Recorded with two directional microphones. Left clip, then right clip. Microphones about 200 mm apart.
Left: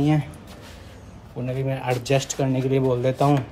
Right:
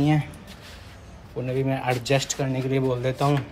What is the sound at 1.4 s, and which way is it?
Speech, 5° left (ahead or behind).